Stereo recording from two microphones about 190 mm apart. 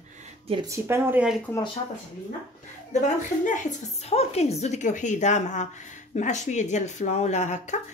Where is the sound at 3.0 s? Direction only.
40° left (ahead or behind).